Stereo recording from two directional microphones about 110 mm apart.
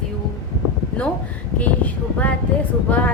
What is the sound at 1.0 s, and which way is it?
A woman's voice, 10° left (ahead or behind).